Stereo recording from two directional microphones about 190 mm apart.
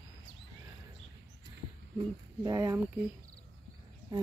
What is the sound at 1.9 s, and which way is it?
Speech, 20° right (ahead or behind).